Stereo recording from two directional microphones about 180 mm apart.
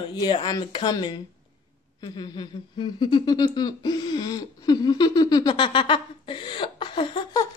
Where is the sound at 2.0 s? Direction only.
25° left (ahead or behind).